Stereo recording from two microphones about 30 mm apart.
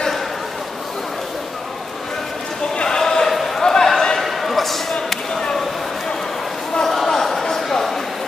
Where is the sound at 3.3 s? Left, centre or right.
Centre.